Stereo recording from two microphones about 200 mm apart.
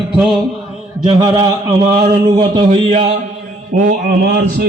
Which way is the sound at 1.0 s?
30° right (ahead or behind).